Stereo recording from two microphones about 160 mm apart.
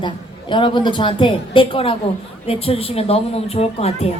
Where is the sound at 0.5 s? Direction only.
30° left (ahead or behind).